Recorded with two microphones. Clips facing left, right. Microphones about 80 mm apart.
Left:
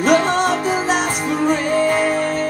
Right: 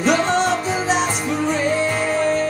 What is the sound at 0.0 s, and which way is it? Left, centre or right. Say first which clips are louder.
Music: left 2 dB; left.